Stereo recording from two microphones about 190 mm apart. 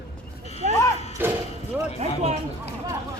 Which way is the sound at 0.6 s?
40° right (ahead or behind).